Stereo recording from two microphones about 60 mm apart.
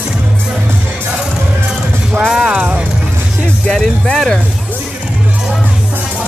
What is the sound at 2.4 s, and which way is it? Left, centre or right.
Music, centre.